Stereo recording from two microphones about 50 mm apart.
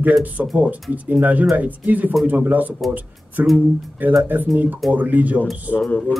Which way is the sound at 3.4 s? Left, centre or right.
Right.